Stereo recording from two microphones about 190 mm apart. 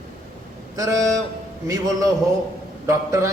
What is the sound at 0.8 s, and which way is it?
Speech, 20° right (ahead or behind).